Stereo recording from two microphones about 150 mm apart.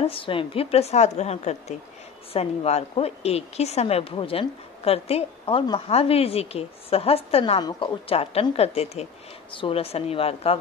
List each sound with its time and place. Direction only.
0.0 s a woman's voice: 35° left (ahead or behind)